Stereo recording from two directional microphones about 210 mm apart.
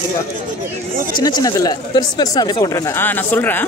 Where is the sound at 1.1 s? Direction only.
20° left (ahead or behind).